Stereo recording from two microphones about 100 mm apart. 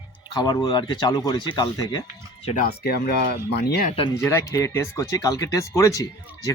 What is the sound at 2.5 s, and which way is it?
Speech, 85° left.